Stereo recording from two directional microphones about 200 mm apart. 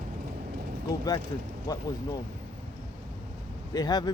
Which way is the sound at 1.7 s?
20° left (ahead or behind).